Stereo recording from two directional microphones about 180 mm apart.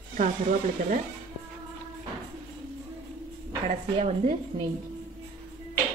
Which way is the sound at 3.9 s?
35° right (ahead or behind).